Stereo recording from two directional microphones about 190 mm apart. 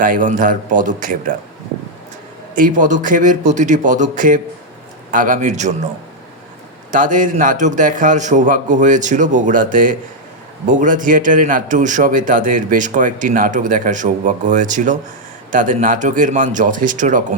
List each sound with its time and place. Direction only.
0.0 s a man's voice: 45° right (ahead or behind)
2.6 s a man's voice: 45° right (ahead or behind)
6.9 s a man's voice: 45° right (ahead or behind)